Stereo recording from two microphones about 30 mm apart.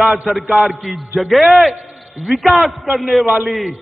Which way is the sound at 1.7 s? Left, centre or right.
Right.